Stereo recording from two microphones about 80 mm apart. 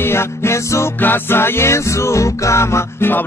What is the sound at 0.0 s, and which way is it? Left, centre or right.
Music, left.